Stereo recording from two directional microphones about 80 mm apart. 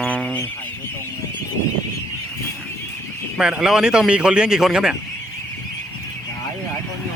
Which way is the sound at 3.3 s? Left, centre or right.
Centre.